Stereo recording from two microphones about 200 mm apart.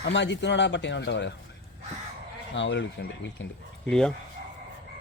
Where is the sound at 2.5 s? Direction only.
65° left (ahead or behind).